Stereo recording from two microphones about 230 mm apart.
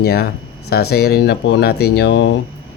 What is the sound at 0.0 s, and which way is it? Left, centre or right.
Speech, left.